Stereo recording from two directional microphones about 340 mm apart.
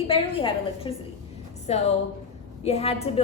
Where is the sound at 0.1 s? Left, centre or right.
Centre.